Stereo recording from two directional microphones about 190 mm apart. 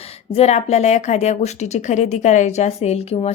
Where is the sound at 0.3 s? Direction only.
35° left (ahead or behind).